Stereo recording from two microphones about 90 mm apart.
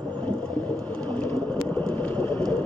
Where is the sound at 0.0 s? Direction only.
15° left (ahead or behind).